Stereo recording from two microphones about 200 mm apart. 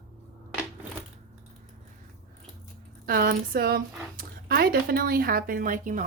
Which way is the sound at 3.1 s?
45° right (ahead or behind).